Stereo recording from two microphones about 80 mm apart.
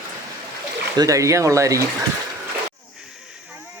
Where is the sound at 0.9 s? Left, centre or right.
Right.